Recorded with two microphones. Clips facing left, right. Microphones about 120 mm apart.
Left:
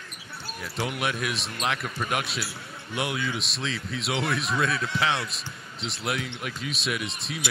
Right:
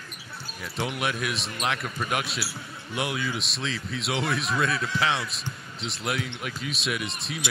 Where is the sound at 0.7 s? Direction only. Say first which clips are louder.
Even; centre (ahead or behind).